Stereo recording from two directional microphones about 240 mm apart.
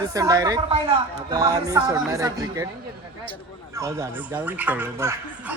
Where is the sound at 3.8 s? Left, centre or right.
Centre.